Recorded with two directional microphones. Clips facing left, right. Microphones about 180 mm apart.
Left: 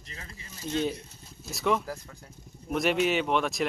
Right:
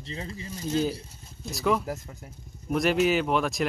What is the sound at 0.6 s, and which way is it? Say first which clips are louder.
Speech: right 2 dB; centre (ahead or behind).